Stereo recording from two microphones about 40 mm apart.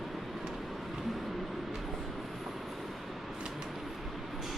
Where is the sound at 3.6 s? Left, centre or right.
Centre.